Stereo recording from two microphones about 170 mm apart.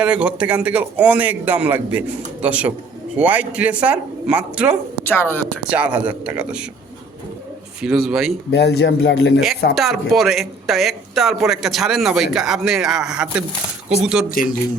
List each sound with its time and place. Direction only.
0.0 s a man's voice: 5° right (ahead or behind)
5.0 s speech: 10° left (ahead or behind)
5.6 s a man's voice: 10° right (ahead or behind)
7.8 s speech: 5° right (ahead or behind)
8.4 s a man's voice: 80° left
9.7 s speech: centre (ahead or behind)
14.3 s speech: 55° left (ahead or behind)